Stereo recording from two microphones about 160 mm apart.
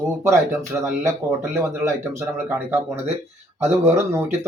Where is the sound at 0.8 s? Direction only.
15° right (ahead or behind).